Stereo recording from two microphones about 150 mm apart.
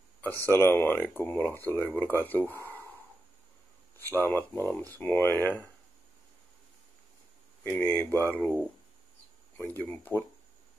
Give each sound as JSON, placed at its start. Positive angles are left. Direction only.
{"t": 0.5, "sound": "speech", "side_deg": 15}
{"t": 4.0, "sound": "speech", "side_deg": 15}
{"t": 7.6, "sound": "speech", "side_deg": 15}